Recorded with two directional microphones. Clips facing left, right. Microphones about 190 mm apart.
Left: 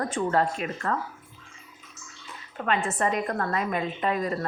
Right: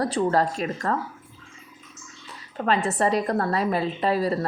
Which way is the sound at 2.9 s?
35° right (ahead or behind).